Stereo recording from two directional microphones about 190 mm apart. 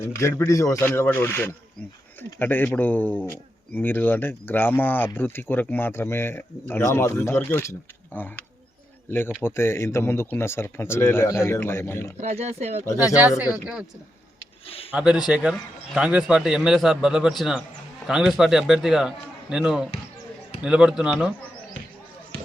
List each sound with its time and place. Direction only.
0.2 s speech: 15° left (ahead or behind)
12.1 s speech: 35° right (ahead or behind)
14.9 s a man's voice: 5° right (ahead or behind)